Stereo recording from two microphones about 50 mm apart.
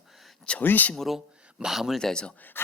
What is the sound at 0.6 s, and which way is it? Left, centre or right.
Speech, left.